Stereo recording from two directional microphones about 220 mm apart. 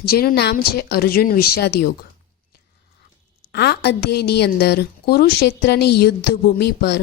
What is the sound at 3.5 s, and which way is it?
A woman's voice, 50° left (ahead or behind).